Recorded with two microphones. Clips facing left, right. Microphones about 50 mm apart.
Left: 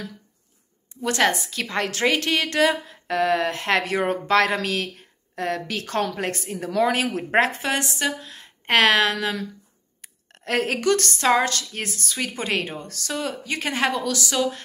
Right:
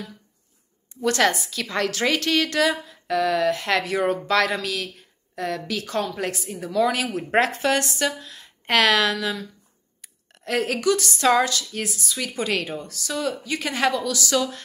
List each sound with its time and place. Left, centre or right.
1.0 s a woman's voice: left
10.0 s a sound: left
11.1 s speech: left
11.4 s a woman's voice: left
12.2 s a woman's voice: left
12.8 s a woman's voice: left
13.1 s a woman's voice: left
14.3 s speech: left